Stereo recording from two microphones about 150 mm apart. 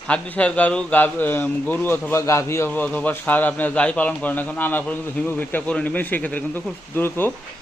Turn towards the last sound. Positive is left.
turn(degrees=15)  # may be behind; listen again after turning